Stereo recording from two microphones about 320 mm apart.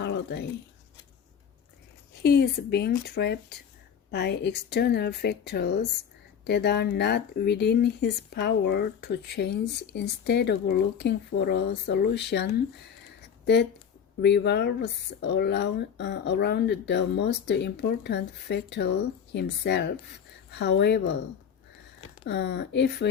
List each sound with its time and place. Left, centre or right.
0.0 s a sound: left
2.2 s speech: left
22.3 s speech: left